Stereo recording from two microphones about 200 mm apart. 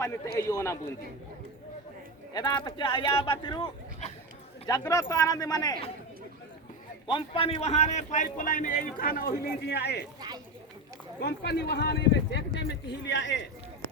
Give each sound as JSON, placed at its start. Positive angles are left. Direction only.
{"t": 0.0, "sound": "speech", "side_deg": 15}
{"t": 2.3, "sound": "speech", "side_deg": 20}
{"t": 7.1, "sound": "a man's voice", "side_deg": 25}
{"t": 10.2, "sound": "speech", "side_deg": -20}
{"t": 11.2, "sound": "a man's voice", "side_deg": 55}